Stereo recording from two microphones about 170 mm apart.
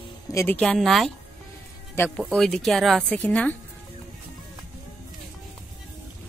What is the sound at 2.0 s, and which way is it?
Speech, 15° left (ahead or behind).